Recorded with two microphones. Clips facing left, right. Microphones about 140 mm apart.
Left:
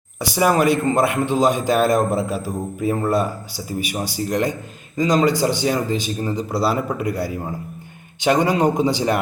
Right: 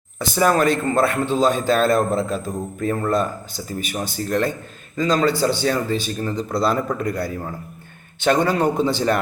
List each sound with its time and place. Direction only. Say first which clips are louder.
0.2 s a man's voice: even; 10° left (ahead or behind)